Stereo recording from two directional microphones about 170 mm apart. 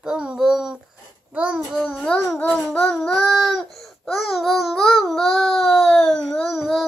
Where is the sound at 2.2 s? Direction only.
15° left (ahead or behind).